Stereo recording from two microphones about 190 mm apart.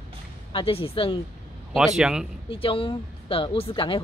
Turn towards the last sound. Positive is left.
turn(degrees=30)  # may be behind; listen again after turning